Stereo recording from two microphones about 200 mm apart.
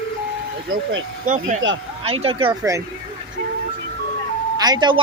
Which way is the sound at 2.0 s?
30° right (ahead or behind).